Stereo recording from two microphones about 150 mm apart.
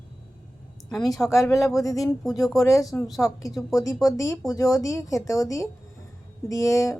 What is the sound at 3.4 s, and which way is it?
A woman's voice, 25° left (ahead or behind).